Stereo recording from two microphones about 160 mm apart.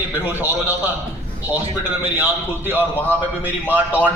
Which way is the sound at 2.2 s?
10° right (ahead or behind).